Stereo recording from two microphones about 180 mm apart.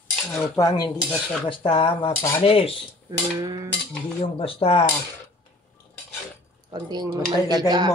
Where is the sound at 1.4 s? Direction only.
30° left (ahead or behind).